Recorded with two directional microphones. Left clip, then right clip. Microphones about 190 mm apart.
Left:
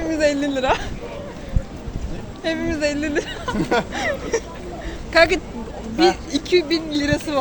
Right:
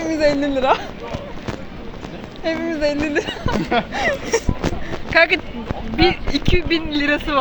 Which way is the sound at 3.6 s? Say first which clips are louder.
Even; 70° left (ahead or behind).